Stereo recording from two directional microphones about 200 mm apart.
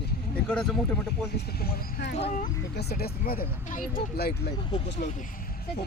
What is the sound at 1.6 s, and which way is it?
Speech, 50° left (ahead or behind).